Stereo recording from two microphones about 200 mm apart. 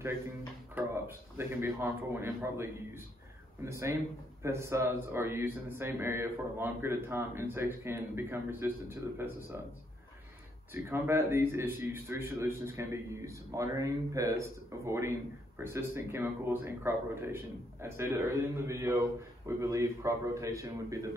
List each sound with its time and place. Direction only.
0.7 s speech: 10° right (ahead or behind)
10.7 s speech: 10° right (ahead or behind)